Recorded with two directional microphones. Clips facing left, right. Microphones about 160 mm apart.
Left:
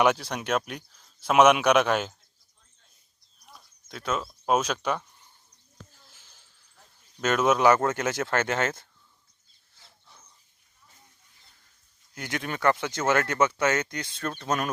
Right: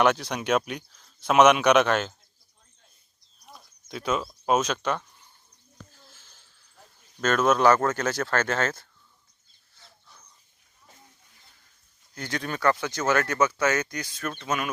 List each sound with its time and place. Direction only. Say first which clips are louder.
0.0 s speech: right 1 dB; 5° left (ahead or behind)
3.5 s speech: right 5 dB; centre (ahead or behind)
6.1 s a sound: right 3 dB; 15° left (ahead or behind)
7.2 s a man's voice: right 1 dB; 15° left (ahead or behind)
12.1 s speech: right 1 dB; 20° left (ahead or behind); by 14.7 s 35° left (ahead or behind)